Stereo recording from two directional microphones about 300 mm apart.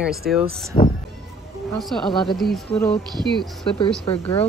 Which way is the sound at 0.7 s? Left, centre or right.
Centre.